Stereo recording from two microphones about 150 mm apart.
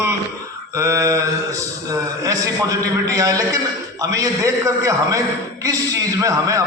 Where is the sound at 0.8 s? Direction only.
20° right (ahead or behind).